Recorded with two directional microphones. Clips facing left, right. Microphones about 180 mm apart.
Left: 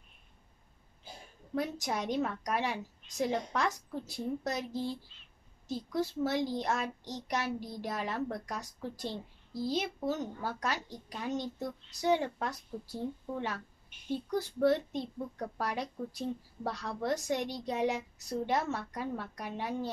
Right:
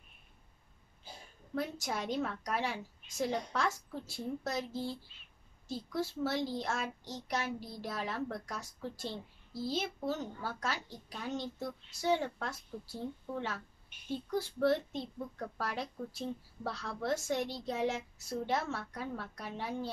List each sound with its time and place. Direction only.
1.5 s a child's voice: 15° left (ahead or behind)
18.9 s a child's voice: 15° left (ahead or behind)